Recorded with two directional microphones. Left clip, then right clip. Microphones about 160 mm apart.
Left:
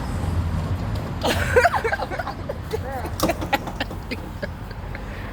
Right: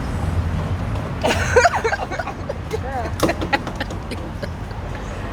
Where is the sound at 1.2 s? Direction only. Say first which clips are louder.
Right 3 dB; 15° left (ahead or behind).